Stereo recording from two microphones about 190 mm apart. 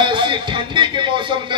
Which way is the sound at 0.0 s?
25° right (ahead or behind).